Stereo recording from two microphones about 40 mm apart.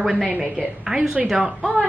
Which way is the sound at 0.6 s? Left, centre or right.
Centre.